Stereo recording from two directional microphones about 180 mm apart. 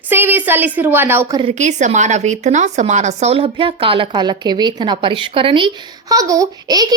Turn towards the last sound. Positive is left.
turn(degrees=-20)  # may be behind; listen again after turning